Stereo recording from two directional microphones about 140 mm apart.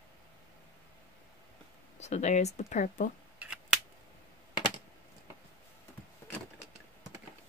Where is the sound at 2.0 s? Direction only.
55° left (ahead or behind).